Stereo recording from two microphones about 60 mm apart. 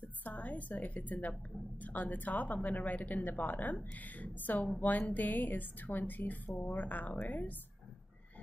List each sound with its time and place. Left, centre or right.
0.2 s a woman's voice: left